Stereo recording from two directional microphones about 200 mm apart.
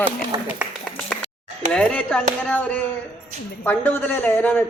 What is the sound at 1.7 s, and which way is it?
Speech, 5° left (ahead or behind).